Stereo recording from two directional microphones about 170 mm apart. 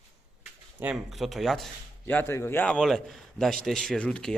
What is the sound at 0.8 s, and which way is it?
Speech, 5° right (ahead or behind).